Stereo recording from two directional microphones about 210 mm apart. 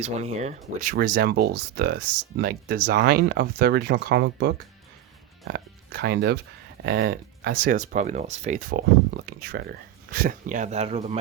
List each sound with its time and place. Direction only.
0.0 s speech: 30° right (ahead or behind)
0.8 s speech: 40° right (ahead or behind)
8.7 s speech: 45° right (ahead or behind); by 11.2 s 30° right (ahead or behind)